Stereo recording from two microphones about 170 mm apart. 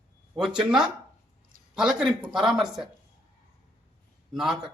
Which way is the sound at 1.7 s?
5° right (ahead or behind).